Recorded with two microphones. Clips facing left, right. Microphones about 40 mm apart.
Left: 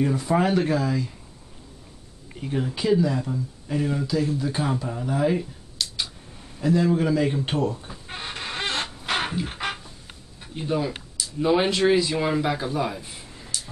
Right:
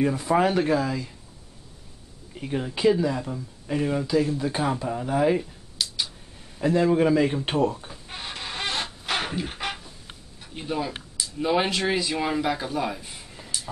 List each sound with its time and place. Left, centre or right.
0.0 s speech: centre
2.4 s speech: centre
6.6 s speech: centre
7.9 s a sound: centre
10.5 s speech: centre